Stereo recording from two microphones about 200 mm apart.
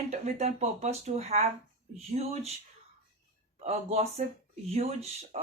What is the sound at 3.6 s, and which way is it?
Speech, 30° right (ahead or behind).